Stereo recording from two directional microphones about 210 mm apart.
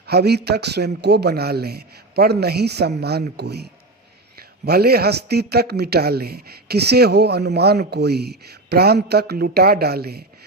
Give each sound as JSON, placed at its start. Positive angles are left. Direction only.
{"t": 0.0, "sound": "a man's voice", "side_deg": -50}